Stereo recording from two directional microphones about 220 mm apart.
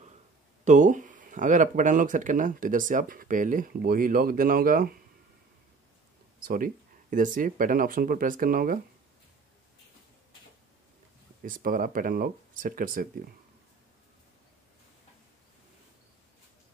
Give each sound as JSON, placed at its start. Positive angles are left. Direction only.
{"t": 0.7, "sound": "speech", "side_deg": -35}
{"t": 6.4, "sound": "speech", "side_deg": -40}
{"t": 11.4, "sound": "speech", "side_deg": -40}